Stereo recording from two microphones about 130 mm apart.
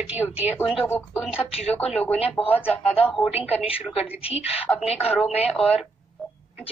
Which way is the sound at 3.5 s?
50° left (ahead or behind).